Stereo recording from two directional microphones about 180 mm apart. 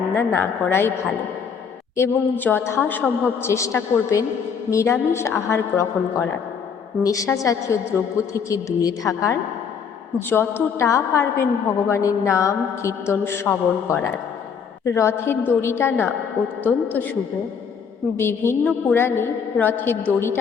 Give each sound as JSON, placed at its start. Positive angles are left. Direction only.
{"t": 0.2, "sound": "a woman's voice", "side_deg": 10}
{"t": 2.0, "sound": "a woman's voice", "side_deg": 10}
{"t": 18.2, "sound": "a woman's voice", "side_deg": 15}